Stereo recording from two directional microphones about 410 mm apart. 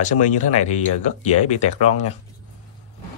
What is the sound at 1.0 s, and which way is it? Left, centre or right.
Speech, centre.